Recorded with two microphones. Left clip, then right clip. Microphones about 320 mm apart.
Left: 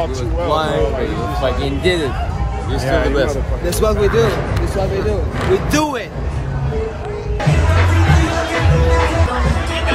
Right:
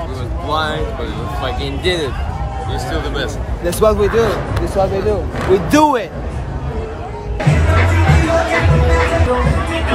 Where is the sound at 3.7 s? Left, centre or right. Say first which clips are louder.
Right 2 dB; centre.